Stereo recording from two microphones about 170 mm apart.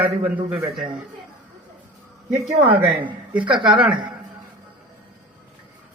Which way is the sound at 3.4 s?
30° right (ahead or behind).